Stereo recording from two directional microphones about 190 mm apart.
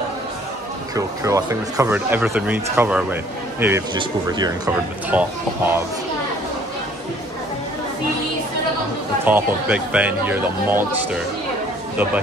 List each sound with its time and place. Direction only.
0.9 s speech: 15° right (ahead or behind)
3.9 s speech: 25° right (ahead or behind)
5.1 s speech: 10° right (ahead or behind)
9.2 s speech: 10° right (ahead or behind)